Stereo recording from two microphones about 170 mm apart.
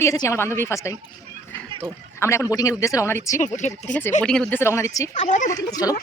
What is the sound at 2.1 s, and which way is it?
A woman's voice, 15° left (ahead or behind).